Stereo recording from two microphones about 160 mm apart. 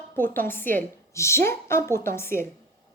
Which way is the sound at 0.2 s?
15° left (ahead or behind).